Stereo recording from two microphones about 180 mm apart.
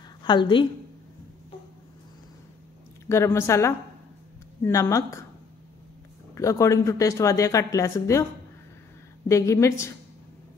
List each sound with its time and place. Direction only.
0.2 s a woman's voice: 25° left (ahead or behind)
3.1 s speech: 15° left (ahead or behind)
6.3 s speech: 15° left (ahead or behind)
9.3 s speech: 15° left (ahead or behind)